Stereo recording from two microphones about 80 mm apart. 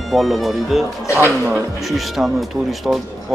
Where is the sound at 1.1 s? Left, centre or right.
Right.